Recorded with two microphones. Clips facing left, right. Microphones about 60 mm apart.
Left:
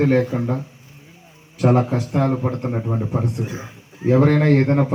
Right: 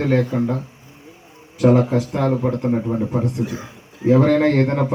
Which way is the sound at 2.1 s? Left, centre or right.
Centre.